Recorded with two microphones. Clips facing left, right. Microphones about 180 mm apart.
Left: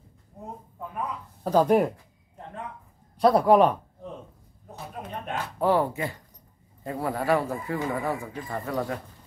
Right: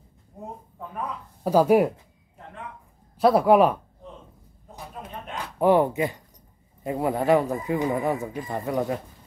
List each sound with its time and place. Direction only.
1.4 s speech: 10° right (ahead or behind)
3.2 s speech: 5° right (ahead or behind)
5.3 s speech: 20° right (ahead or behind)